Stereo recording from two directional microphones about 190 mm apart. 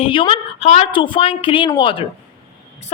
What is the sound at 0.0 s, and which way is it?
A woman's voice, 25° left (ahead or behind).